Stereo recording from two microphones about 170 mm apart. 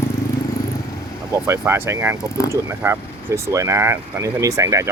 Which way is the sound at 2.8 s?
15° right (ahead or behind).